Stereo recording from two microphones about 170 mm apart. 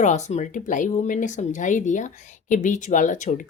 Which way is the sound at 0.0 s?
45° left (ahead or behind).